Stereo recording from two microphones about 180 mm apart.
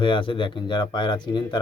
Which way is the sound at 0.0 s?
30° left (ahead or behind).